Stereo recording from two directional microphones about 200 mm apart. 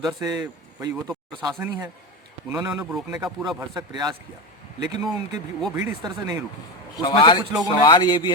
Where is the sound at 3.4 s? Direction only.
20° right (ahead or behind).